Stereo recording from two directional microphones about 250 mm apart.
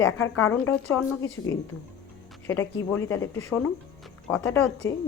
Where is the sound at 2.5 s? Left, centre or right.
Centre.